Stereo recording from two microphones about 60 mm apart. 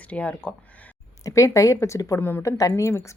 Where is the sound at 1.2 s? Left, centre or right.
Left.